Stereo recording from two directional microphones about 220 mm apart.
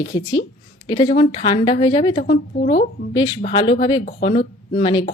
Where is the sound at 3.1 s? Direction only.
20° left (ahead or behind).